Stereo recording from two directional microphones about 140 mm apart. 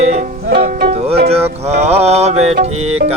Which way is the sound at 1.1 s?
45° right (ahead or behind).